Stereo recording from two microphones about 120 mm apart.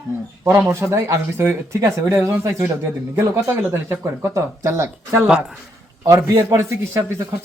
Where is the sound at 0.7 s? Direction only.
20° right (ahead or behind).